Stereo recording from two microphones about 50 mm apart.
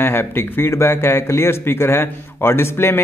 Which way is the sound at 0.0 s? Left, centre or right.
Left.